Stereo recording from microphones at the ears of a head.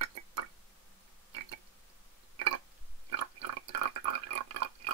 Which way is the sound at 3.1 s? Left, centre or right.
Right.